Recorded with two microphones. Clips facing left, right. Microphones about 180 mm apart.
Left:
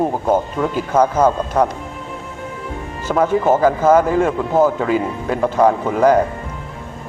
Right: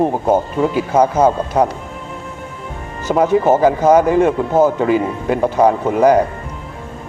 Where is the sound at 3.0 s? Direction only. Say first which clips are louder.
Right 2 dB; 10° right (ahead or behind).